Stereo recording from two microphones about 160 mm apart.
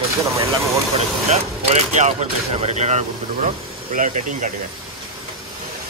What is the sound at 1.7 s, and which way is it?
Speech, 45° right (ahead or behind).